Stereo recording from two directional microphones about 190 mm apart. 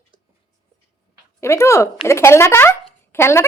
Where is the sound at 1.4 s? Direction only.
15° left (ahead or behind).